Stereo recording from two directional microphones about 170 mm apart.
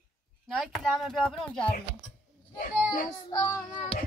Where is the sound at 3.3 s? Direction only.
25° left (ahead or behind).